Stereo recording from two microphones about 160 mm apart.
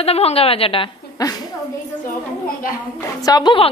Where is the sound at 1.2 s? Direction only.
25° left (ahead or behind).